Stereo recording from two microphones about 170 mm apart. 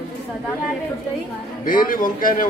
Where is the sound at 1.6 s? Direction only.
55° left (ahead or behind).